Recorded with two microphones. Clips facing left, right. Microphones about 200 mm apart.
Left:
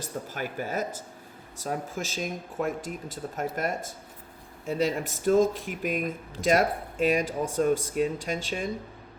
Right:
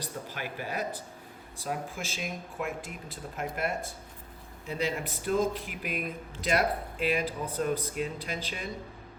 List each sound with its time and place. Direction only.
0.0 s speech: 45° left (ahead or behind)